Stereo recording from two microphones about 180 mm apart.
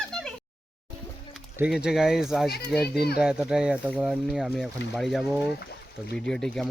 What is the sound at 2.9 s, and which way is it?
Speech, 60° left (ahead or behind).